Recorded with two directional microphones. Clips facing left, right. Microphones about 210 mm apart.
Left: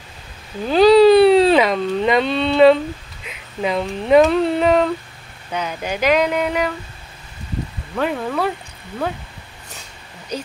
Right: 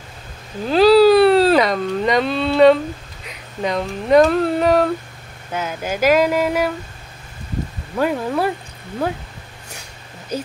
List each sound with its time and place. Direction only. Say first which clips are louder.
0.7 s a sound: left 1 dB; centre (ahead or behind)
3.6 s speech: left 1 dB; 5° left (ahead or behind)
8.0 s speech: right 2 dB; 5° right (ahead or behind)